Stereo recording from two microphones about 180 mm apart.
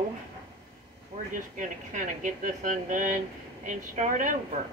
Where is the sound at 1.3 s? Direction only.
45° right (ahead or behind).